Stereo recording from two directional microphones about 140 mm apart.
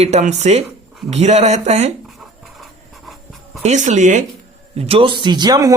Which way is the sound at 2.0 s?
Centre (ahead or behind).